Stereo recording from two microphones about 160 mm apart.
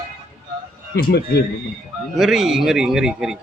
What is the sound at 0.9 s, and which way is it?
Speech, 75° left (ahead or behind).